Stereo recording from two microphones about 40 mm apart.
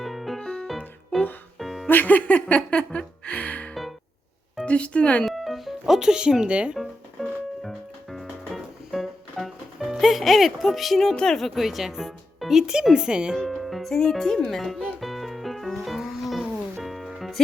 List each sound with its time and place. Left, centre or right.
0.0 s music: centre
0.3 s music: centre
0.7 s music: centre
1.9 s music: left
2.6 s speech: left
5.2 s music: centre
6.4 s speech: right
6.7 s music: centre
10.0 s speech: centre
11.1 s speech: left
11.3 s speech: centre; by 13.3 s right
13.3 s speech: centre
14.4 s speech: centre
15.0 s music: centre